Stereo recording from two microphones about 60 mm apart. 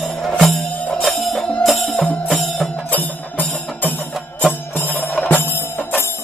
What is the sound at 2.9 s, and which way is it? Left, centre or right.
Music, left.